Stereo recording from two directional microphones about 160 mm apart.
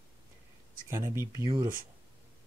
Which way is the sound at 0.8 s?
15° right (ahead or behind).